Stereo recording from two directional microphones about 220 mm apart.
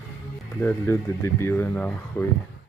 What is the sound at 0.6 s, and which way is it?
Speech, 10° left (ahead or behind).